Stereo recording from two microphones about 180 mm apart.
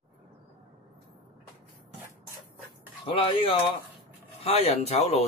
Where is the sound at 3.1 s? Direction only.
30° left (ahead or behind).